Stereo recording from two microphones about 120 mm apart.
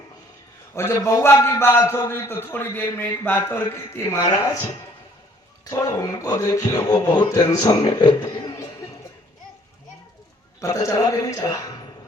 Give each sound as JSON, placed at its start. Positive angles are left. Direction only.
{"t": 0.7, "sound": "a man's voice", "side_deg": 25}
{"t": 5.7, "sound": "a man's voice", "side_deg": 30}
{"t": 10.6, "sound": "a man's voice", "side_deg": 25}